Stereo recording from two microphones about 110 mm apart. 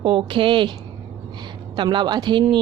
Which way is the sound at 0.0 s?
50° right (ahead or behind).